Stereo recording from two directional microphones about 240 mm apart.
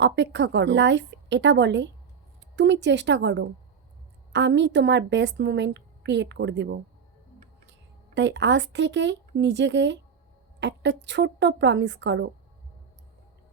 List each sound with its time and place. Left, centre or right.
0.0 s a woman's voice: right